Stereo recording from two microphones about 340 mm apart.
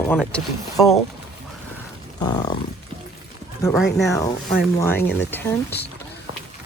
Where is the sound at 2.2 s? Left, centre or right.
Centre.